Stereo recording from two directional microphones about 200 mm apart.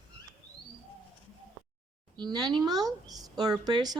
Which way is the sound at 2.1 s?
20° right (ahead or behind).